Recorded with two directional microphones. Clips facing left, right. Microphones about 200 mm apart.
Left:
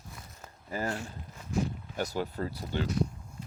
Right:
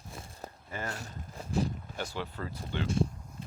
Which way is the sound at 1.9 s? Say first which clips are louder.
Left 5 dB; 40° left (ahead or behind).